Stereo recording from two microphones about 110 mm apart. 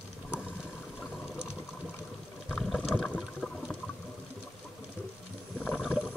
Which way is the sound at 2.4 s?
Centre (ahead or behind).